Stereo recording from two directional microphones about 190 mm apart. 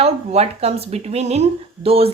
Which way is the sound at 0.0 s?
35° right (ahead or behind).